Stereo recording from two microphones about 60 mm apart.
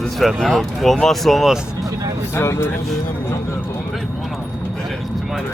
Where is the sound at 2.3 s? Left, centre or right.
Left.